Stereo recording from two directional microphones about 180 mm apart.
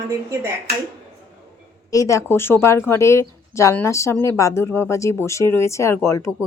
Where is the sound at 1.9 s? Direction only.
15° left (ahead or behind).